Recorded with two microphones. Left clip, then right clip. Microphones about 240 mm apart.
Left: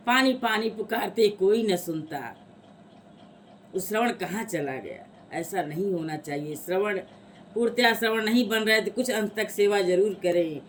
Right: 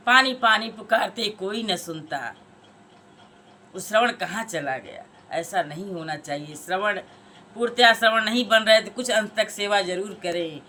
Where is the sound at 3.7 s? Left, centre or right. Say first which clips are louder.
Right 5 dB; centre.